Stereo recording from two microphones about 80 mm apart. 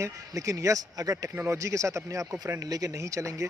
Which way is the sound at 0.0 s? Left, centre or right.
Right.